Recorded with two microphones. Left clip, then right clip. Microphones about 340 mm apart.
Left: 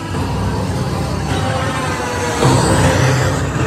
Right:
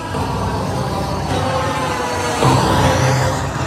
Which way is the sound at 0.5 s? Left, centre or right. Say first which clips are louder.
Right 1 dB; right.